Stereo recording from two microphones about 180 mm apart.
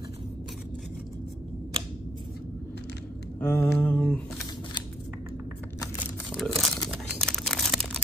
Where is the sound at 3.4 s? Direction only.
10° left (ahead or behind).